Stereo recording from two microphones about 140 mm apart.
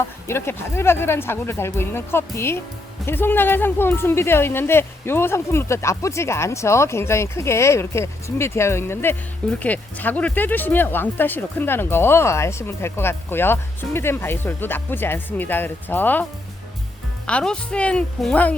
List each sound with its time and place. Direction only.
0.3 s speech: 20° left (ahead or behind)
17.2 s speech: 5° left (ahead or behind)